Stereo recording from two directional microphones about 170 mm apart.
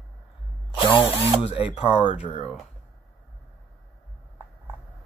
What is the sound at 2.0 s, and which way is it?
Speech, 35° left (ahead or behind).